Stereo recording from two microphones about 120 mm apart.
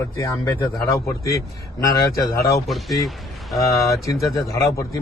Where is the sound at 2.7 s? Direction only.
Centre (ahead or behind).